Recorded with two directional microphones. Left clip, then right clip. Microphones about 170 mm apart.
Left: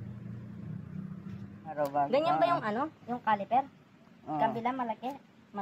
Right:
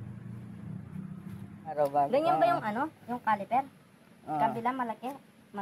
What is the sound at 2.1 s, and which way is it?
A woman's voice, 20° left (ahead or behind).